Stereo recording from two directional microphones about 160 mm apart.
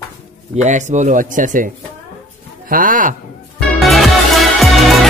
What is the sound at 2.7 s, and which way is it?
Speech, 55° right (ahead or behind).